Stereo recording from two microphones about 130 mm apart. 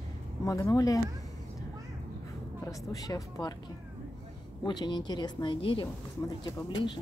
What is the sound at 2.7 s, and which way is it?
Speech, 25° left (ahead or behind).